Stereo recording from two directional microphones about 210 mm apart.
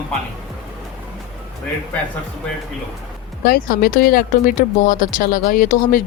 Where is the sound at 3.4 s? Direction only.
45° left (ahead or behind).